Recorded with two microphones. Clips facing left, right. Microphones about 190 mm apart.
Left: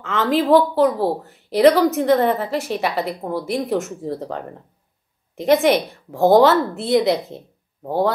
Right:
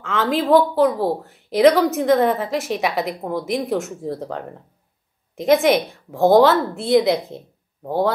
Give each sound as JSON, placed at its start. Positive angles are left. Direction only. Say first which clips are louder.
{"t": 0.0, "sound": "a woman's voice", "louder": "left 2 dB", "side_deg": 0}